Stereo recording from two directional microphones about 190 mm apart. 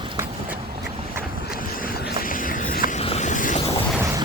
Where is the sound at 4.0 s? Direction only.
15° right (ahead or behind).